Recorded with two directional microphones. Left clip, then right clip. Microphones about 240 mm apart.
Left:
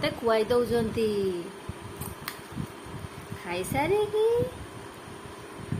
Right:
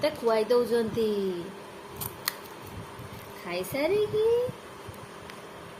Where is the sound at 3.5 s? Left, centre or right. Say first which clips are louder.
Left 1 dB; centre.